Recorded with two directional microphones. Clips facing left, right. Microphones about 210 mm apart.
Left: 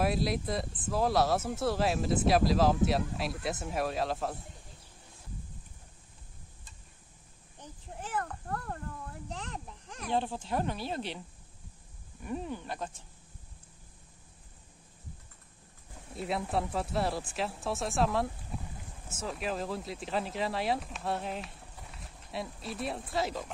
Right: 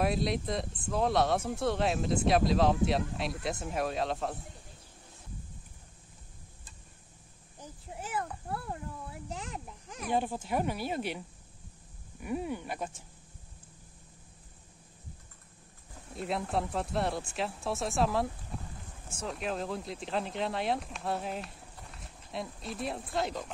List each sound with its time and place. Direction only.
0.0 s speech: centre (ahead or behind)
7.9 s a sound: 10° right (ahead or behind)
12.2 s speech: 10° right (ahead or behind)
16.2 s speech: centre (ahead or behind)